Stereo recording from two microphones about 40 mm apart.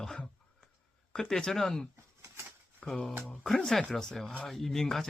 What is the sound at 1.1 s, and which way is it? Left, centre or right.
Speech, centre.